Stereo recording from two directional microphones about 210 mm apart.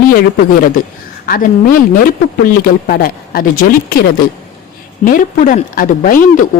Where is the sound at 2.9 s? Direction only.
45° left (ahead or behind).